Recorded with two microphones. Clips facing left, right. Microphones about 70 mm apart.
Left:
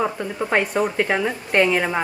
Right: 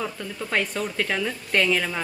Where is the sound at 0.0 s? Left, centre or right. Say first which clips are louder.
Left 7 dB; left.